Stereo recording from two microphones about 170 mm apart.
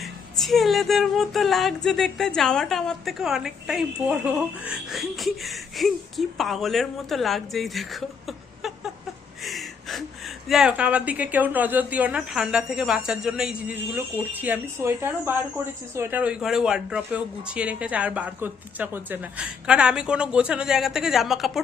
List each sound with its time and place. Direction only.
0.0 s music: centre (ahead or behind)
9.4 s speech: centre (ahead or behind)